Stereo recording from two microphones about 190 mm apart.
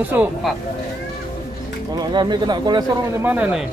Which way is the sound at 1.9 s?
20° right (ahead or behind).